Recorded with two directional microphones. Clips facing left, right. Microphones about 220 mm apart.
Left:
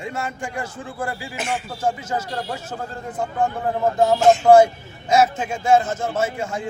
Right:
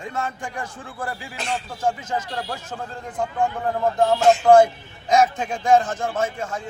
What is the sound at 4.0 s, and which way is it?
A man's voice, 5° left (ahead or behind).